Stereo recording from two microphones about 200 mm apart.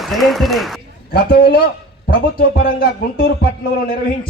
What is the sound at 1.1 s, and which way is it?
A man's voice, 50° left (ahead or behind).